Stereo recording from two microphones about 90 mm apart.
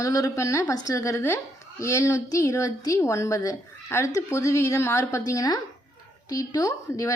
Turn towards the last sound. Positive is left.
turn(degrees=40)  # may be behind; listen again after turning